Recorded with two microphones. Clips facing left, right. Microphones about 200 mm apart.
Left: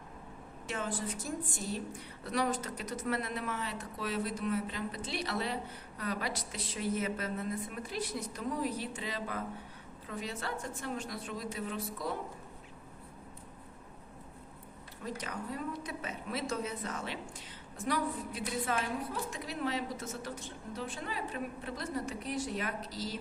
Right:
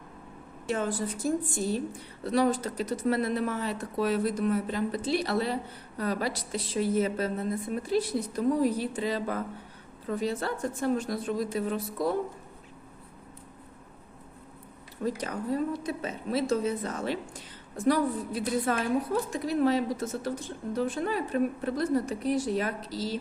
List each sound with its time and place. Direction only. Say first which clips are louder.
0.7 s a woman's voice: right 7 dB; 35° right (ahead or behind)
15.0 s a woman's voice: right 9 dB; 35° right (ahead or behind)